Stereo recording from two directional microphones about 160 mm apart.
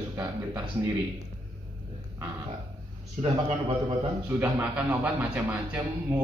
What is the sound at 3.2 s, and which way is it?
Speech, 40° right (ahead or behind).